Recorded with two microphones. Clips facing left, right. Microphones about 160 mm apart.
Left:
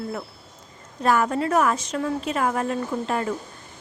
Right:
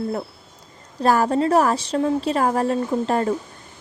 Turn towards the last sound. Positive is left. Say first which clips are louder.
# right 5 dB
turn(degrees=-35)  # may be behind; listen again after turning